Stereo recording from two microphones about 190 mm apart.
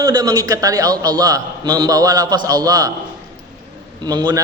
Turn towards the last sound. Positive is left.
turn(degrees=-20)  # may be behind; listen again after turning